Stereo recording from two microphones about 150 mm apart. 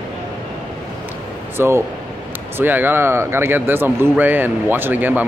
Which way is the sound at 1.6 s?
15° right (ahead or behind).